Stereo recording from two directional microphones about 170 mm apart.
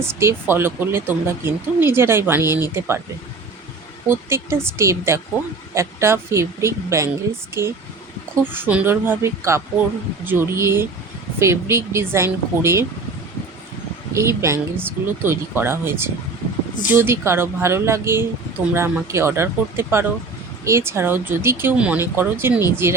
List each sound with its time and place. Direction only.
0.2 s speech: 15° right (ahead or behind)
4.1 s speech: 15° right (ahead or behind)
14.1 s speech: 15° right (ahead or behind)